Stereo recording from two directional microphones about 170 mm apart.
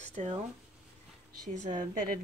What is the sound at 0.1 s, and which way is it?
Speech, 45° right (ahead or behind).